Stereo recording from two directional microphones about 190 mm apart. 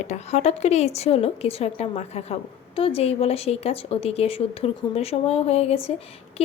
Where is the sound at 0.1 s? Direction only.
35° left (ahead or behind).